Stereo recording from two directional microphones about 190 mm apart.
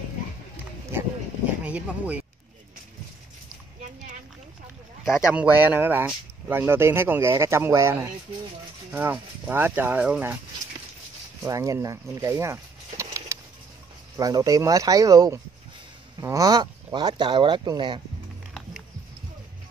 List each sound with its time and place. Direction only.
1.6 s speech: 5° right (ahead or behind)
5.3 s speech: 10° right (ahead or behind)
11.4 s speech: 15° right (ahead or behind)